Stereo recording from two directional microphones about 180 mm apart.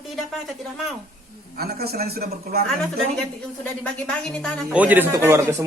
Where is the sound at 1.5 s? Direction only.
60° right (ahead or behind).